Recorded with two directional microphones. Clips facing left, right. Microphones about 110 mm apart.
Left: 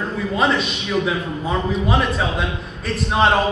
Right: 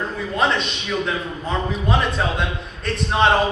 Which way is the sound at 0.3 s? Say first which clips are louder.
Left 1 dB; 5° left (ahead or behind).